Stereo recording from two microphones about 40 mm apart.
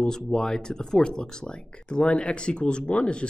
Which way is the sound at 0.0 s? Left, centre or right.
Centre.